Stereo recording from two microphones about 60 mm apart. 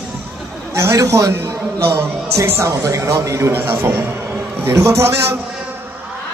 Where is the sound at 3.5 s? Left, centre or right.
Right.